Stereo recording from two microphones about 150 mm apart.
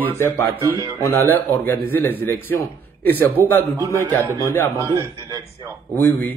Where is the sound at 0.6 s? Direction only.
20° right (ahead or behind).